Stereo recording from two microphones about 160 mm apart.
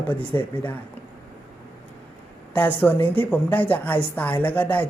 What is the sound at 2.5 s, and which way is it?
Speech, 10° left (ahead or behind).